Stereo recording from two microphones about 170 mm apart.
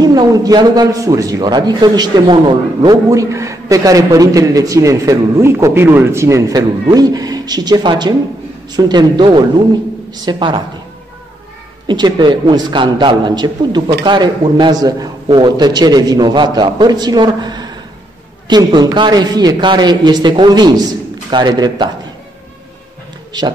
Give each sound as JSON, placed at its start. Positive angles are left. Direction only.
{"t": 0.0, "sound": "a man's voice", "side_deg": -25}
{"t": 11.9, "sound": "a man's voice", "side_deg": -25}